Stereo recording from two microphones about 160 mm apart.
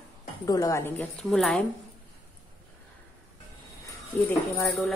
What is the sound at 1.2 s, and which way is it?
Speech, 5° left (ahead or behind).